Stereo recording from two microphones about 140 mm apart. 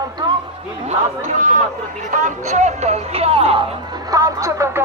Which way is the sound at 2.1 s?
60° right (ahead or behind).